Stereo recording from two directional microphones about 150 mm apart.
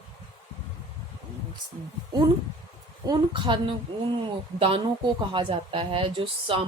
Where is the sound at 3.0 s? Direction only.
30° right (ahead or behind).